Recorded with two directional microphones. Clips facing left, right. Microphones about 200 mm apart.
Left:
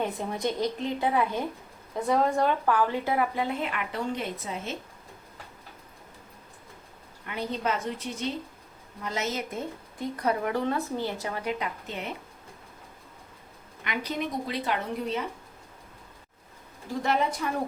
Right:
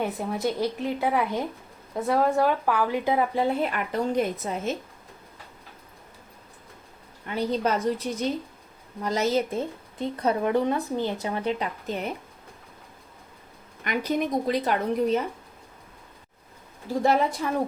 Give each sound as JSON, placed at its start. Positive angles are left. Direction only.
{"t": 0.0, "sound": "a woman's voice", "side_deg": -5}
{"t": 3.3, "sound": "speech", "side_deg": -35}
{"t": 7.3, "sound": "a woman's voice", "side_deg": -35}
{"t": 13.8, "sound": "speech", "side_deg": -45}